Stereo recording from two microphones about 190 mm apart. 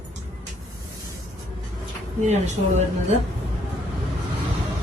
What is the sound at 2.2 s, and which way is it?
Speech, 35° right (ahead or behind).